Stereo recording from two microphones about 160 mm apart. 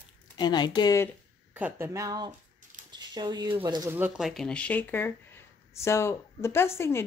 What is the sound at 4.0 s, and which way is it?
Speech, 5° right (ahead or behind).